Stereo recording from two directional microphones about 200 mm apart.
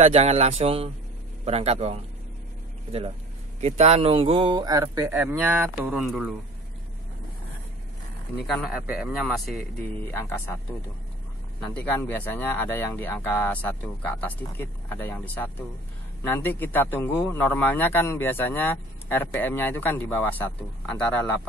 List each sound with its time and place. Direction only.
0.0 s speech: 30° right (ahead or behind); by 6.3 s centre (ahead or behind)
8.5 s a man's voice: centre (ahead or behind)
11.6 s a man's voice: 10° left (ahead or behind)